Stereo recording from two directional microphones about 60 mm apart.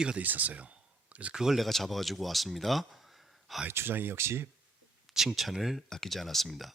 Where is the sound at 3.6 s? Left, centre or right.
Right.